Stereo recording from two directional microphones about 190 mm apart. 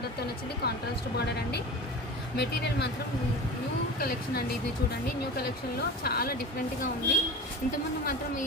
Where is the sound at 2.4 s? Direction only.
65° left (ahead or behind).